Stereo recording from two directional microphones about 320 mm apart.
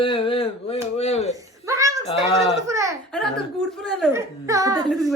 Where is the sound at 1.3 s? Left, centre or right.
Centre.